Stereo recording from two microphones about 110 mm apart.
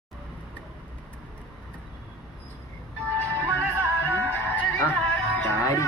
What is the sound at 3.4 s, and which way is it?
Music, 15° right (ahead or behind).